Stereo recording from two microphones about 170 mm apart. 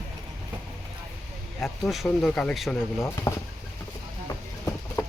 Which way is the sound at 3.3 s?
15° left (ahead or behind).